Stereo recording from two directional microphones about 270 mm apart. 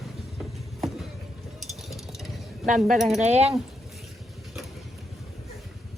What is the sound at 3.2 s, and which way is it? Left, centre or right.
Speech, right.